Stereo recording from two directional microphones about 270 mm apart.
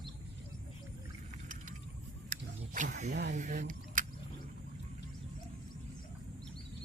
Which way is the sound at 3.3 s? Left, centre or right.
Right.